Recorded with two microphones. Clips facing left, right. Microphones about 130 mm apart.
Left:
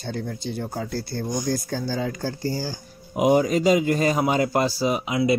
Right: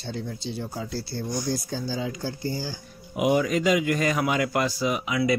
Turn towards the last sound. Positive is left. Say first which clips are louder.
# left 3 dB
turn(degrees=30)  # may be behind; listen again after turning